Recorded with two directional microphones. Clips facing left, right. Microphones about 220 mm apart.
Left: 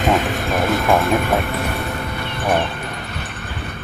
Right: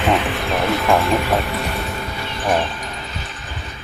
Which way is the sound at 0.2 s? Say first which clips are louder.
Left 1 dB; 45° left (ahead or behind).